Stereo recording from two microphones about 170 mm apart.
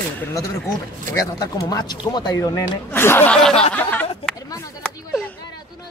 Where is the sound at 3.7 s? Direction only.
10° left (ahead or behind).